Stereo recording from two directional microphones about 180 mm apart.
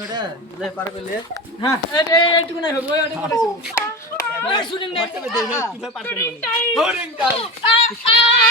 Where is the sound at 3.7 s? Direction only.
15° left (ahead or behind).